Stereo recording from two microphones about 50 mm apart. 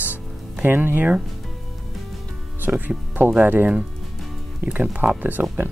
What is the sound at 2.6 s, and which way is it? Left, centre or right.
Speech, right.